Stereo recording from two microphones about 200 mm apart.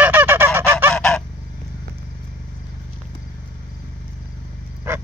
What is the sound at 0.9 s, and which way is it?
Goose, 5° left (ahead or behind).